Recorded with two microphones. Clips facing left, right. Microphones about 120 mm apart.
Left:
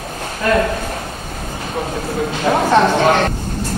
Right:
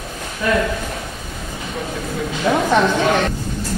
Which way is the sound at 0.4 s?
45° left (ahead or behind).